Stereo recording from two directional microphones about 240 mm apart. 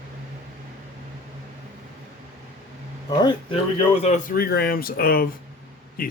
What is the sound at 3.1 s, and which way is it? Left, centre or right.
Speech, centre.